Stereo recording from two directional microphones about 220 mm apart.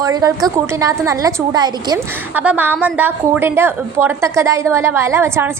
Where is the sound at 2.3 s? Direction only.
10° right (ahead or behind).